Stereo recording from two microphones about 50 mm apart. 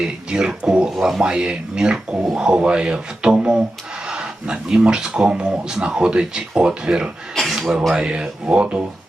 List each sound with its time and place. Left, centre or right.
0.0 s speech: centre
7.3 s speech: centre
7.9 s speech: centre